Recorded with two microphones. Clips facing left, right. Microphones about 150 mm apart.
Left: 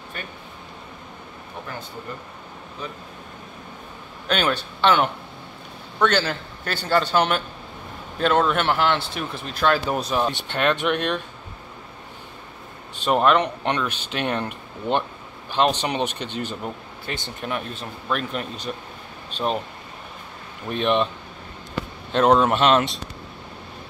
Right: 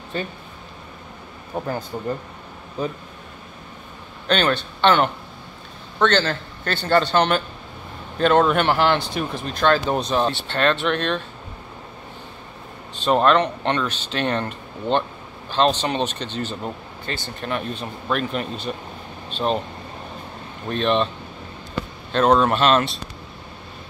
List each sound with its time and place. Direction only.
0.1 s speech: 30° right (ahead or behind)
2.8 s speech: 35° right (ahead or behind)
4.3 s speech: 5° left (ahead or behind)
12.9 s speech: 10° left (ahead or behind)
20.6 s speech: 10° left (ahead or behind)
22.1 s speech: 15° left (ahead or behind)